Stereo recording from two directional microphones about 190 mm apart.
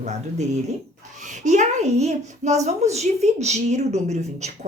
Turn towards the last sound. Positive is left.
turn(degrees=-35)  # may be behind; listen again after turning